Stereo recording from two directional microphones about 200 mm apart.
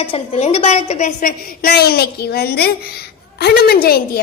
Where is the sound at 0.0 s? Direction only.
30° left (ahead or behind).